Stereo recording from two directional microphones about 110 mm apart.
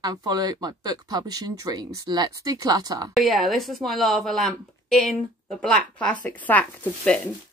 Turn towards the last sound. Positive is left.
turn(degrees=10)  # may be behind; listen again after turning